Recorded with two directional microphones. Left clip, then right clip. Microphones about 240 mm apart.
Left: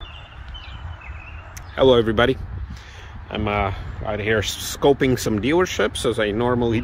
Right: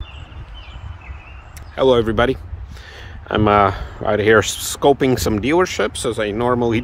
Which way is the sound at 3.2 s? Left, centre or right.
Right.